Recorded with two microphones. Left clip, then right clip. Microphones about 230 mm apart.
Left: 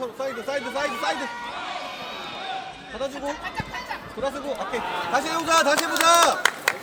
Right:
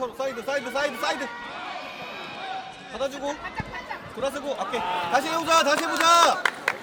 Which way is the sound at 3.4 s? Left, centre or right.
Left.